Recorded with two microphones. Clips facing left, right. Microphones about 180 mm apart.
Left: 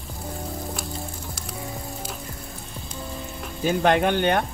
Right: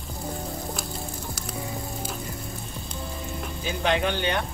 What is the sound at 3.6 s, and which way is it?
Speech, 50° left (ahead or behind).